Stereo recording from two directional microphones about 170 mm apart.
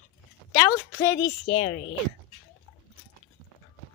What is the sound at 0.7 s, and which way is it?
Speech, 20° left (ahead or behind).